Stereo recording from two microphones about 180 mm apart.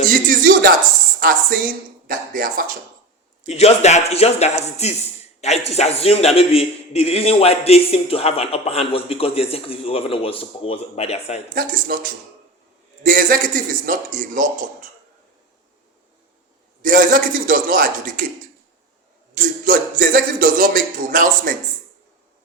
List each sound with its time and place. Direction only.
0.1 s a sound: 50° right (ahead or behind)
1.2 s a man's voice: 55° right (ahead or behind)
3.4 s a man's voice: 35° left (ahead or behind)
11.5 s a man's voice: 55° right (ahead or behind)
13.0 s a man's voice: 50° right (ahead or behind)
16.8 s a man's voice: 50° right (ahead or behind)
19.3 s a man's voice: 50° right (ahead or behind)